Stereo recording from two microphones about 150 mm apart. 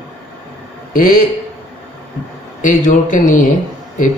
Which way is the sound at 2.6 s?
60° left (ahead or behind).